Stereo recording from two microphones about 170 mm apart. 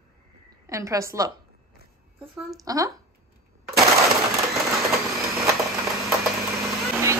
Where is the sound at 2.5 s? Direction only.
20° right (ahead or behind).